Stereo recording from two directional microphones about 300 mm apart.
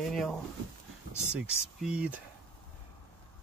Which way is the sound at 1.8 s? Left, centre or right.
Centre.